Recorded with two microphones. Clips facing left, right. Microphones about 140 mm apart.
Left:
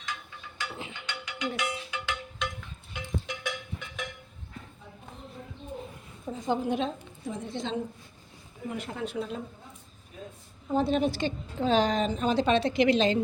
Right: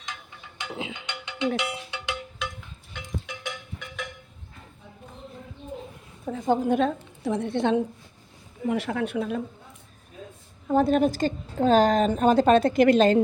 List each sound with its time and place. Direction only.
0.6 s music: 20° right (ahead or behind)
1.5 s cowbell: 25° right (ahead or behind)
2.4 s cowbell: 5° right (ahead or behind)
6.2 s a woman's voice: 55° right (ahead or behind)
7.3 s a woman's voice: 70° right (ahead or behind)
8.6 s speech: 85° right; by 9.4 s 60° right (ahead or behind)
10.7 s a woman's voice: 50° right (ahead or behind)